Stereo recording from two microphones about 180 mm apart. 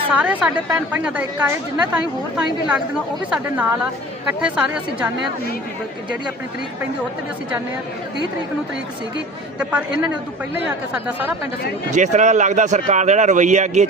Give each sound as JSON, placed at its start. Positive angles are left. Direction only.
{"t": 0.1, "sound": "a woman's voice", "side_deg": -5}
{"t": 9.6, "sound": "a woman's voice", "side_deg": -5}
{"t": 11.9, "sound": "speech", "side_deg": -40}